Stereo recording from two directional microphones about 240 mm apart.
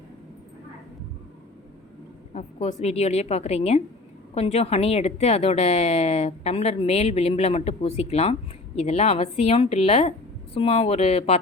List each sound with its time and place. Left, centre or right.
2.3 s a woman's voice: left